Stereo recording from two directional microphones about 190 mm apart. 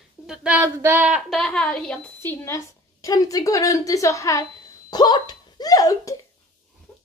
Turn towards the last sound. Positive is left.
turn(degrees=20)  # may be behind; listen again after turning